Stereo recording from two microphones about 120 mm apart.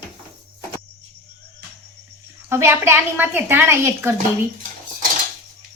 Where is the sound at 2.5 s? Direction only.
20° right (ahead or behind).